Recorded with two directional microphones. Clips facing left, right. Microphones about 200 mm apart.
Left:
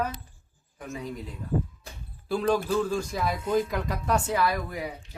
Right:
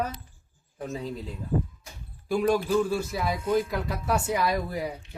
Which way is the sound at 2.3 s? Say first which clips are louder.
Right 2 dB; 10° right (ahead or behind).